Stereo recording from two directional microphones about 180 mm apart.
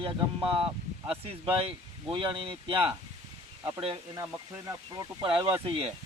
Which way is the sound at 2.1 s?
30° right (ahead or behind).